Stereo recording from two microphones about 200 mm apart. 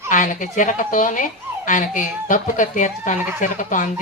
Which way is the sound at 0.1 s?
40° left (ahead or behind).